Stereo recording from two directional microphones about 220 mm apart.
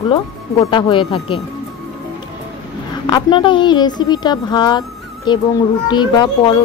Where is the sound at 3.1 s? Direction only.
20° left (ahead or behind).